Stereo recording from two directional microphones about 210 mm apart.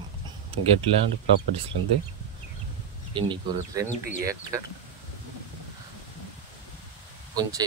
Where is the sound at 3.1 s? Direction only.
25° right (ahead or behind).